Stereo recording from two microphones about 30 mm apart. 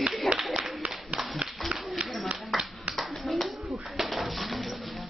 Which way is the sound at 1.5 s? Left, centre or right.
Centre.